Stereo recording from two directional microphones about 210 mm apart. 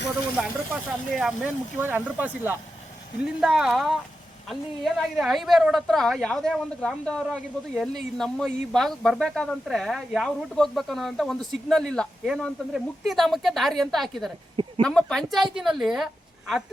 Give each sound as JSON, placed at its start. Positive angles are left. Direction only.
{"t": 0.3, "sound": "a woman's voice", "side_deg": 0}